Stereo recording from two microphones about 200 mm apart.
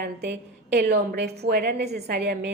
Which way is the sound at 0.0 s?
55° right (ahead or behind).